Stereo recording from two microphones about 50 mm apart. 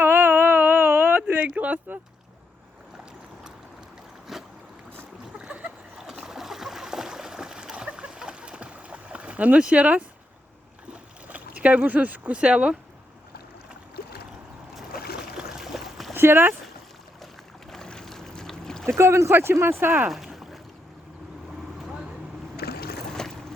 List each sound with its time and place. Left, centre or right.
0.0 s whimper: right
4.3 s boat: centre
5.4 s a sound: right
6.0 s a sound: centre; by 10.0 s right
10.9 s boat: right
12.4 s speech: right
15.4 s a sound: centre
16.1 s speech: right
17.7 s boat: centre
18.9 s speech: right
20.1 s boat: centre
23.2 s a sound: centre